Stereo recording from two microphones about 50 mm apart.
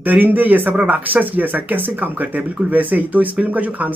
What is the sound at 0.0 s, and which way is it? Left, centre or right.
Speech, right.